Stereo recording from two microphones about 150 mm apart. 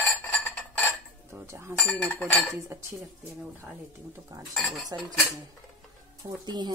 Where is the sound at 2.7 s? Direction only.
15° right (ahead or behind).